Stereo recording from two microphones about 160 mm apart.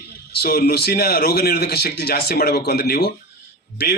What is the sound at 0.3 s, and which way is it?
Speech, 70° left (ahead or behind).